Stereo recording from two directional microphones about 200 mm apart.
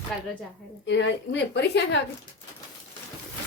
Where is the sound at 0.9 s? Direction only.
60° left (ahead or behind).